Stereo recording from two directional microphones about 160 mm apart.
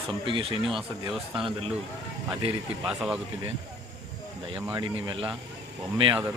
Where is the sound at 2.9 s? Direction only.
5° right (ahead or behind).